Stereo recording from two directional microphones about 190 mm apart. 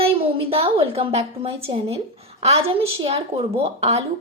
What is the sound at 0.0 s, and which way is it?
A woman's voice, 30° right (ahead or behind).